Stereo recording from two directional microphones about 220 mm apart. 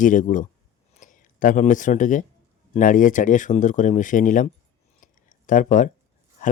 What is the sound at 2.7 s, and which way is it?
Speech, 35° left (ahead or behind).